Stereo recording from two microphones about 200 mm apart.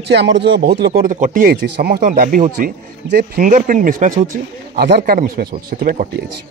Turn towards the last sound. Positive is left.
turn(degrees=-45)  # may be behind; listen again after turning